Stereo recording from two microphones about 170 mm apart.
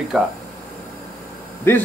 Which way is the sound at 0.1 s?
5° right (ahead or behind).